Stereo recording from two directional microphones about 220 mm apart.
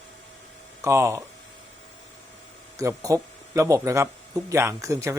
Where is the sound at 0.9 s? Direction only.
15° right (ahead or behind).